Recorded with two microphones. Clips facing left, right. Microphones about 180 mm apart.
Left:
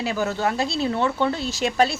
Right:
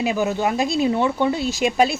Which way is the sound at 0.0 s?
15° right (ahead or behind).